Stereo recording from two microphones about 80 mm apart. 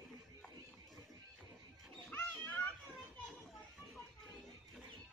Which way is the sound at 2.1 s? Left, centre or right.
Left.